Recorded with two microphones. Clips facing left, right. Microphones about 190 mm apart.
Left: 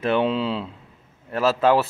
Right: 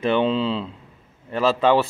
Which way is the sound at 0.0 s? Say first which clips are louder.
Right 1 dB; 5° left (ahead or behind).